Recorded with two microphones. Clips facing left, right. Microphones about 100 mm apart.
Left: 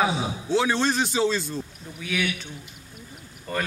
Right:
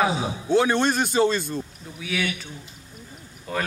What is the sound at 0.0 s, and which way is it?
Speech, centre (ahead or behind).